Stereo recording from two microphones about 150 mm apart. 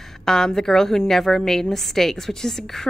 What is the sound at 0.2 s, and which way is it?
A woman's voice, 5° left (ahead or behind).